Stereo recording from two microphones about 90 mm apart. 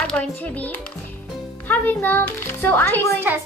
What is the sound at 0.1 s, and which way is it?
A child's voice, 15° left (ahead or behind).